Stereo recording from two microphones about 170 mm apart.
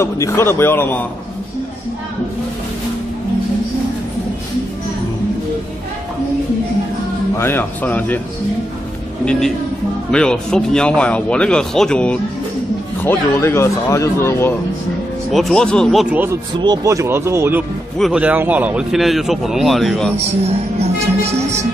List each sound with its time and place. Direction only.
0.0 s speech: 15° left (ahead or behind)
7.3 s speech: 10° left (ahead or behind)
9.2 s speech: 5° left (ahead or behind)
15.3 s speech: centre (ahead or behind)
16.6 s speech: 20° right (ahead or behind)
17.9 s speech: centre (ahead or behind)